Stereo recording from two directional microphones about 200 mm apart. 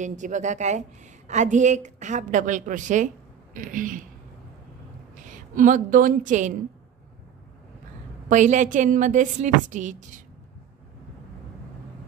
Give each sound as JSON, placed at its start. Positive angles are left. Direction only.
{"t": 0.0, "sound": "a woman's voice", "side_deg": -40}
{"t": 5.1, "sound": "a woman's voice", "side_deg": -40}
{"t": 8.3, "sound": "a woman's voice", "side_deg": -40}